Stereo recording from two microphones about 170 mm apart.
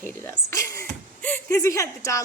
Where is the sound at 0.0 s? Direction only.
15° left (ahead or behind).